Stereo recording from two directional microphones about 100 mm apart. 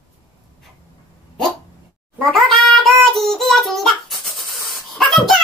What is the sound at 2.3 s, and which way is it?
Child singing, centre (ahead or behind).